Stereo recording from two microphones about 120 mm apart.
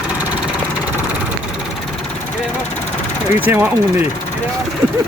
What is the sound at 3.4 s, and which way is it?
Speech, 15° right (ahead or behind).